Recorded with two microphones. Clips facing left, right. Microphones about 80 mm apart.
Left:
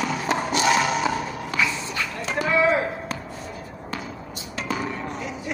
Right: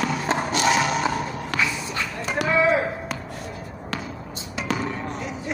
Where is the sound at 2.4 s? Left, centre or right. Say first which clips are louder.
Even; centre.